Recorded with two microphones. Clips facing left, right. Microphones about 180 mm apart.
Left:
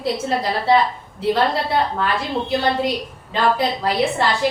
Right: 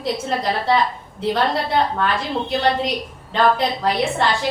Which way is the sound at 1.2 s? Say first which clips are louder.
Left 2 dB; 5° left (ahead or behind).